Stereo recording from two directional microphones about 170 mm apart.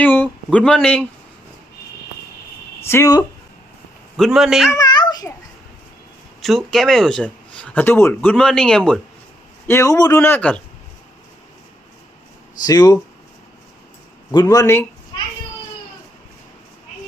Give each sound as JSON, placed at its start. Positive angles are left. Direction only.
{"t": 0.0, "sound": "speech", "side_deg": 10}
{"t": 2.8, "sound": "a man's voice", "side_deg": 15}
{"t": 4.2, "sound": "speech", "side_deg": 0}
{"t": 4.7, "sound": "babbling", "side_deg": 25}
{"t": 6.4, "sound": "speech", "side_deg": 0}
{"t": 9.6, "sound": "a man's voice", "side_deg": 15}
{"t": 12.6, "sound": "a man's voice", "side_deg": 20}
{"t": 14.3, "sound": "a man's voice", "side_deg": 20}